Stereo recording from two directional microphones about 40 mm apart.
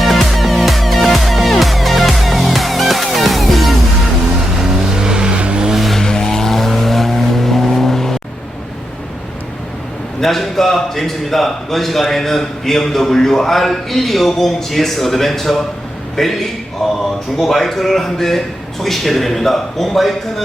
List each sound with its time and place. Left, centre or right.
0.0 s music: centre
4.6 s vehicle: centre
5.7 s vehicle: centre
6.0 s vehicle: centre
10.2 s a man's voice: centre
16.8 s a sound: centre
17.3 s a man's voice: centre